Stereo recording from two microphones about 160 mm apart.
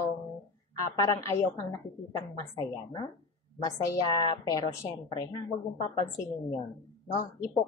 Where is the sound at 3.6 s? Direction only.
25° left (ahead or behind).